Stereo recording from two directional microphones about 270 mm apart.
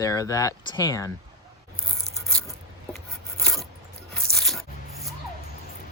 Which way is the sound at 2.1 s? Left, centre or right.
Centre.